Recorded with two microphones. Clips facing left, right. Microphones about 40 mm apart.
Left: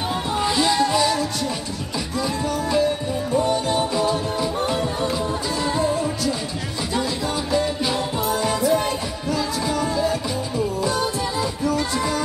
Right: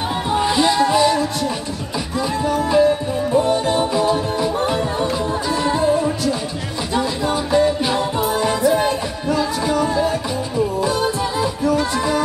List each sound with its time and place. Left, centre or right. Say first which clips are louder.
0.3 s music: right 4 dB; centre
3.3 s music: right 4 dB; right
3.7 s music: right 4 dB; centre